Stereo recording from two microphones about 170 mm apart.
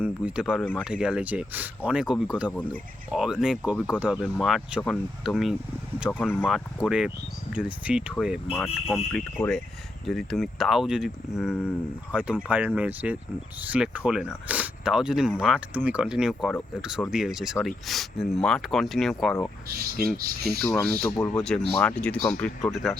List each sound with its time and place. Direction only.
0.0 s speech: 5° right (ahead or behind)
0.6 s speech: 10° left (ahead or behind)
0.9 s speech: 5° right (ahead or behind)
6.1 s speech: 10° left (ahead or behind)
6.8 s speech: 5° right (ahead or behind)
19.6 s speech: 60° right (ahead or behind)
20.6 s speech: 15° left (ahead or behind)
21.3 s speech: 5° left (ahead or behind)